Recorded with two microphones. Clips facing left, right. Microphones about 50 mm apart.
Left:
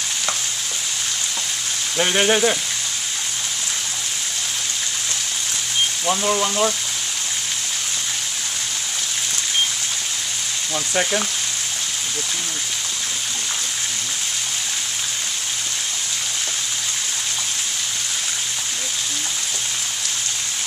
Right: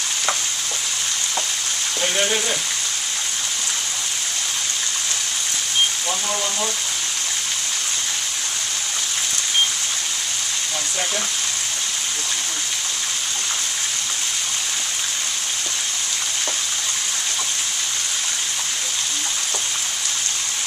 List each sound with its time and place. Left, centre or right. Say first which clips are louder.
2.0 s frying: left 5 dB; left
6.0 s speech: left 5 dB; left